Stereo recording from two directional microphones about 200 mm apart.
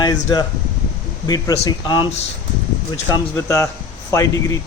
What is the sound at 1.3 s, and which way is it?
Speech, 20° left (ahead or behind).